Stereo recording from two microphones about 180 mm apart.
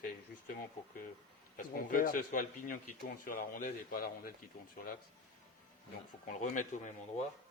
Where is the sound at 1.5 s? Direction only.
50° left (ahead or behind).